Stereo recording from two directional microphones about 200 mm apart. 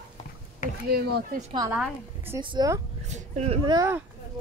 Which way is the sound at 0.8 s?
50° right (ahead or behind).